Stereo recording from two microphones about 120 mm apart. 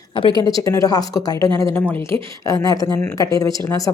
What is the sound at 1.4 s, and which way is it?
Speech, 45° right (ahead or behind).